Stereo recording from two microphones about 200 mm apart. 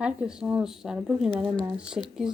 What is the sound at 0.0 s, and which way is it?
Speech, 5° right (ahead or behind).